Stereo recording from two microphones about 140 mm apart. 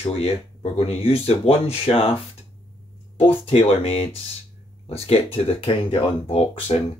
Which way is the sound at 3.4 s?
40° left (ahead or behind).